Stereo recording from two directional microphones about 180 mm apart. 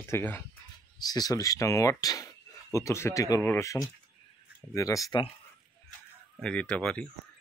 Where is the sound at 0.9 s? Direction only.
20° left (ahead or behind).